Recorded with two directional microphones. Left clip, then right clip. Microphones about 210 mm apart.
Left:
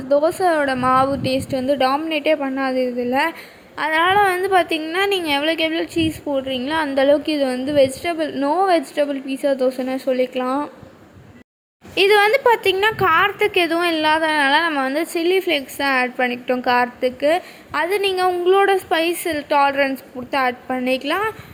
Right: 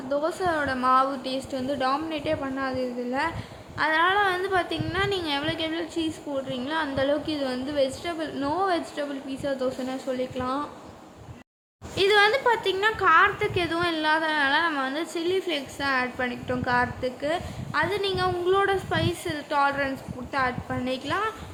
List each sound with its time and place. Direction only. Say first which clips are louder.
0.1 s a woman's voice: left 10 dB; 25° left (ahead or behind)
11.9 s a woman's voice: left 6 dB; 30° left (ahead or behind)